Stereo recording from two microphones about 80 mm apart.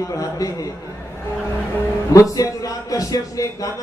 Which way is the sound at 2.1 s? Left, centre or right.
Left.